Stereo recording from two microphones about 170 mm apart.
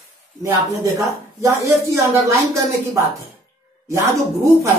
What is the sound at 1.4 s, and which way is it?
Speech, 20° right (ahead or behind).